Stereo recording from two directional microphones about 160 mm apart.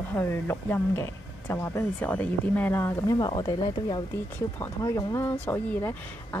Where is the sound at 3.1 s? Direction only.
25° left (ahead or behind).